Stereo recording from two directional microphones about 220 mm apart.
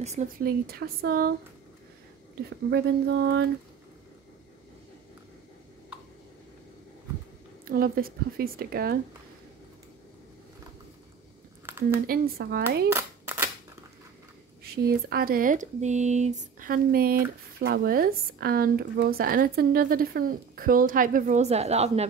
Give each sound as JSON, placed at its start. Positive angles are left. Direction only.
{"t": 0.0, "sound": "speech", "side_deg": -30}
{"t": 2.7, "sound": "speech", "side_deg": -50}
{"t": 7.6, "sound": "speech", "side_deg": -40}
{"t": 11.7, "sound": "a sound", "side_deg": -10}
{"t": 12.1, "sound": "speech", "side_deg": -45}
{"t": 12.9, "sound": "clapping", "side_deg": -10}
{"t": 14.6, "sound": "speech", "side_deg": -45}